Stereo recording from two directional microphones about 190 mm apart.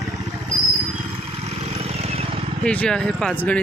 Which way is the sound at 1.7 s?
35° right (ahead or behind).